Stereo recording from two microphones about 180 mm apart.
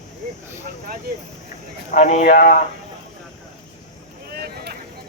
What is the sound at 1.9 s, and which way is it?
Speech, 45° left (ahead or behind).